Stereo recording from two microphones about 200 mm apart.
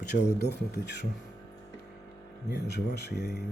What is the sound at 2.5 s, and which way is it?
Speech, 55° left (ahead or behind).